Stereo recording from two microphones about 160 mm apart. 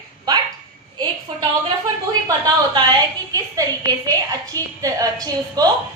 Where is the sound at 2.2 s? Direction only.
20° right (ahead or behind).